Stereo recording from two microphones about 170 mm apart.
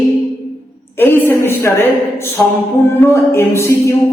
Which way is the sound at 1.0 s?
10° left (ahead or behind).